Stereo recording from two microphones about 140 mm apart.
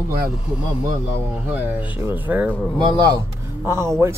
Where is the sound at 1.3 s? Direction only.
10° right (ahead or behind).